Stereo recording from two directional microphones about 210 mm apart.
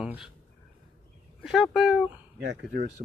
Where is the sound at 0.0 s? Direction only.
5° right (ahead or behind).